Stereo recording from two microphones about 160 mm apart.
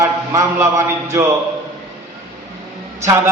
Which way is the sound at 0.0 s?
20° right (ahead or behind).